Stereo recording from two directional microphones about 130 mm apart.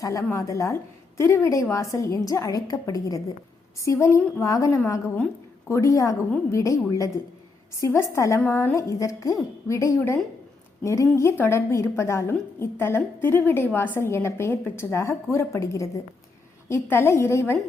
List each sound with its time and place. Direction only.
0.0 s a woman's voice: 25° left (ahead or behind)
7.8 s a woman's voice: 20° left (ahead or behind)